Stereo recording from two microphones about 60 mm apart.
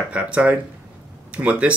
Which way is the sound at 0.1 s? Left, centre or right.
Centre.